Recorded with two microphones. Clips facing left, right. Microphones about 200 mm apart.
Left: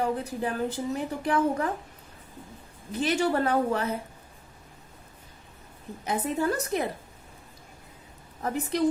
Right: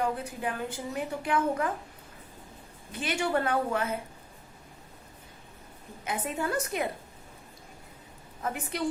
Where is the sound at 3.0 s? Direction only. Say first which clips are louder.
Left 4 dB; 35° left (ahead or behind).